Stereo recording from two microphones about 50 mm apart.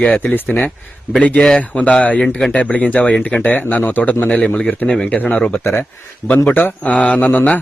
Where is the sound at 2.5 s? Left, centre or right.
Left.